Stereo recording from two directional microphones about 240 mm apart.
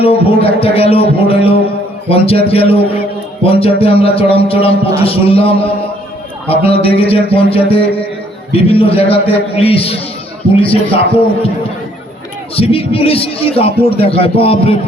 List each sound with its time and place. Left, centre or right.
0.0 s speech: left
12.5 s speech: left